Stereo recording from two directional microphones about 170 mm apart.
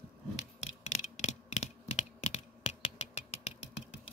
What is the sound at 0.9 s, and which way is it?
Computer keyboard, 45° left (ahead or behind).